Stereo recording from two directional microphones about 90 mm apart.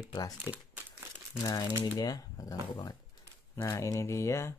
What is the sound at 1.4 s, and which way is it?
Speech, 45° left (ahead or behind).